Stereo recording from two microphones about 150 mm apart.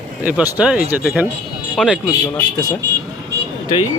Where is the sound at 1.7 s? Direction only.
Centre (ahead or behind).